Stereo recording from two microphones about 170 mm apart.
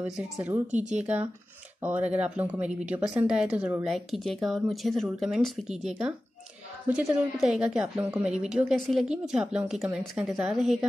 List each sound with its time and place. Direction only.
0.0 s a woman's voice: 10° right (ahead or behind)